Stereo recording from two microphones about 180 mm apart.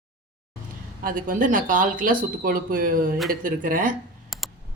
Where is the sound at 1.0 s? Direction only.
50° right (ahead or behind).